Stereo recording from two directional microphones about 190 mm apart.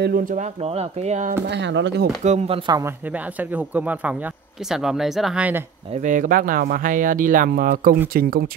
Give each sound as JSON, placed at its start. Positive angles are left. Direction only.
{"t": 0.0, "sound": "speech", "side_deg": -50}
{"t": 1.5, "sound": "speech", "side_deg": -70}
{"t": 2.2, "sound": "speech", "side_deg": -30}
{"t": 3.1, "sound": "speech", "side_deg": -10}
{"t": 6.0, "sound": "speech", "side_deg": -45}